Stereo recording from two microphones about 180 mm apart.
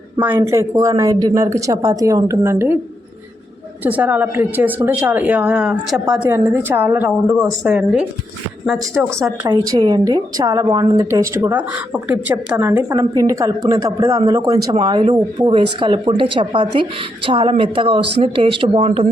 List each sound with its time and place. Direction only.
0.2 s speech: 10° right (ahead or behind)
3.8 s speech: 10° right (ahead or behind)
9.1 s speech: 15° right (ahead or behind); by 19.0 s 30° right (ahead or behind)